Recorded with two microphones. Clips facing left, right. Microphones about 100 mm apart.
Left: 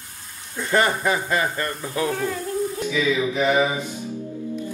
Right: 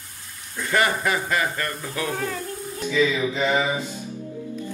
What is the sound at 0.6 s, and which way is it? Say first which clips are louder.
Speech: left 2 dB; 25° left (ahead or behind).